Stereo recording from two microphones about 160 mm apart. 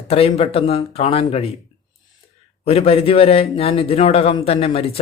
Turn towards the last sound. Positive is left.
turn(degrees=35)  # may be behind; listen again after turning